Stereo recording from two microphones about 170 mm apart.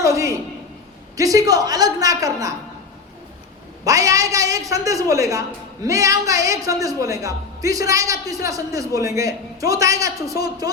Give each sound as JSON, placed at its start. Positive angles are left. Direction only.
{"t": 0.0, "sound": "a sound", "side_deg": -20}
{"t": 1.1, "sound": "a man's voice", "side_deg": -20}
{"t": 3.8, "sound": "a man's voice", "side_deg": -20}